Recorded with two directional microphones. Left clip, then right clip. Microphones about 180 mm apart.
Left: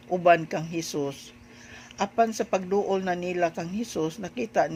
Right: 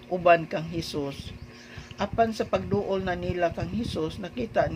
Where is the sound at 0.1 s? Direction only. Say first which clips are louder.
Even; 30° left (ahead or behind).